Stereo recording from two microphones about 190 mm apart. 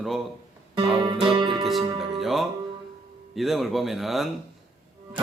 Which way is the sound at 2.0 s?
Centre (ahead or behind).